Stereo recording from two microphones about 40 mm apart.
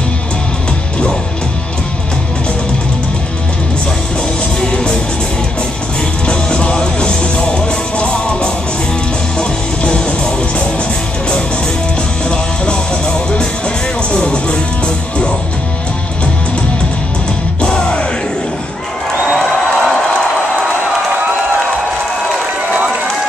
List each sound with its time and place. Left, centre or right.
4.6 s music: centre
6.2 s music: left
12.3 s music: centre
17.6 s music: left
19.3 s crowd: centre